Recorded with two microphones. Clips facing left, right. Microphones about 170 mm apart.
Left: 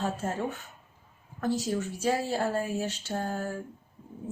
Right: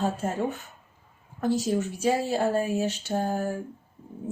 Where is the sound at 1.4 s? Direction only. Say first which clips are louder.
Right 4 dB; 15° right (ahead or behind).